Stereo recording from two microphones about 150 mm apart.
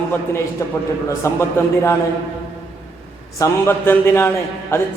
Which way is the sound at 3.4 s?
15° left (ahead or behind).